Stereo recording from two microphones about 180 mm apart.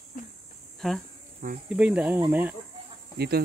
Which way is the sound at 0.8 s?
Centre (ahead or behind).